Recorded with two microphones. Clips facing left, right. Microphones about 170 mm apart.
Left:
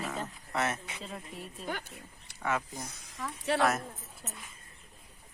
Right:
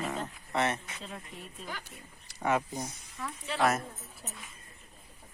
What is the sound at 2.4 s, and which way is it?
Speech, 25° right (ahead or behind).